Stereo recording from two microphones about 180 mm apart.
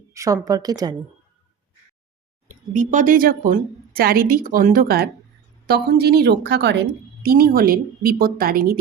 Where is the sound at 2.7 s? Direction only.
45° right (ahead or behind); by 6.7 s 70° right (ahead or behind).